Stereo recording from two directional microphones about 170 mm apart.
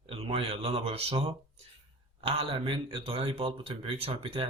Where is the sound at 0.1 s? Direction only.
35° right (ahead or behind).